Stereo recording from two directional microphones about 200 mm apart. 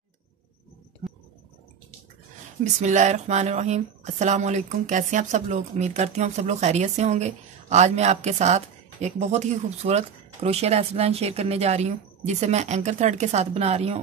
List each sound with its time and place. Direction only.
2.6 s speech: 35° right (ahead or behind)